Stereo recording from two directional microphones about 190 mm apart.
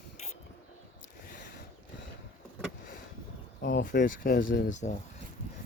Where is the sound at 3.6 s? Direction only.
65° left (ahead or behind).